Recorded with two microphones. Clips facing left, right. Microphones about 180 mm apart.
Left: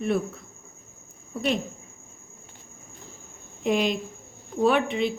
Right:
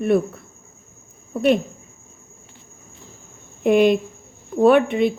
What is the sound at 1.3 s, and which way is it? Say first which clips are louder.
Speech: right 9 dB; 55° right (ahead or behind).